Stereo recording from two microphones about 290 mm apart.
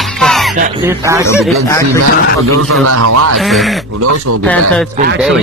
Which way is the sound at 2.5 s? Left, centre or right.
Right.